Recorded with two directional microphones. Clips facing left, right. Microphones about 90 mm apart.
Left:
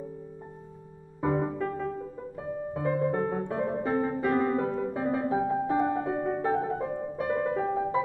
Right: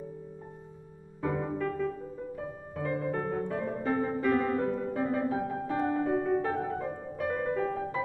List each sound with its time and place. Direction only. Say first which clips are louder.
1.2 s music: left 3 dB; 25° left (ahead or behind)
2.7 s music: left 4 dB; 25° left (ahead or behind)